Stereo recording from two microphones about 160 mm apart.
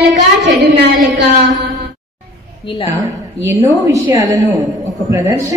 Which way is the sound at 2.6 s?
30° left (ahead or behind).